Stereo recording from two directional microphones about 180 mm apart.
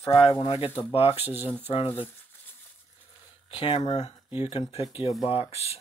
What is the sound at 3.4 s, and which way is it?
Speech, 30° left (ahead or behind).